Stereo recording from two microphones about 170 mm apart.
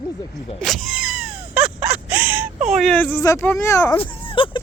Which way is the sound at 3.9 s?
30° left (ahead or behind).